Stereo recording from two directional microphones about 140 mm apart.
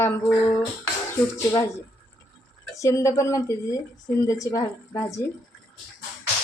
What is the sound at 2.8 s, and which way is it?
Speech, 20° left (ahead or behind).